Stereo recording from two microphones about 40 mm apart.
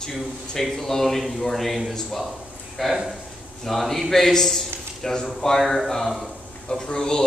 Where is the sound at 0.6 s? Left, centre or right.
Centre.